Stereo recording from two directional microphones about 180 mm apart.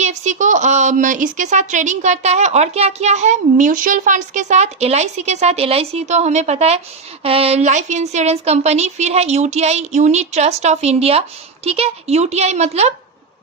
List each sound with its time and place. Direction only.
0.0 s a woman's voice: 40° right (ahead or behind)